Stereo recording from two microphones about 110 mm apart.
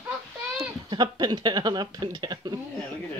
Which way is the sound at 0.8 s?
40° right (ahead or behind).